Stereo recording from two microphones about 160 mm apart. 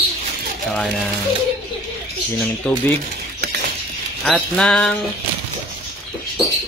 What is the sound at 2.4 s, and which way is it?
Speech, centre (ahead or behind).